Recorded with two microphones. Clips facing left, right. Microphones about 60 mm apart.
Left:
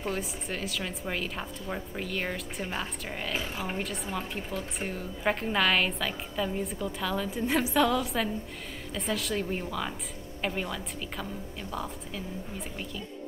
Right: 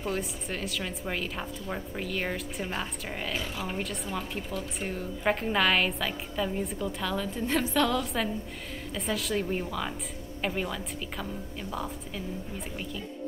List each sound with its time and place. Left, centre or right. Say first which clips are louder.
0.0 s a woman's voice: right 1 dB; centre
3.3 s speech: even; left
3.7 s a woman's voice: even; centre
12.5 s a woman's voice: right 1 dB; centre